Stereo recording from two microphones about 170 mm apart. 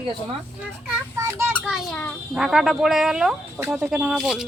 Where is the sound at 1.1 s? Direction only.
15° right (ahead or behind).